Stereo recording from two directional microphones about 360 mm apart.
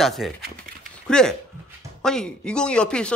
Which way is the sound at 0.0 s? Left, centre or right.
Centre.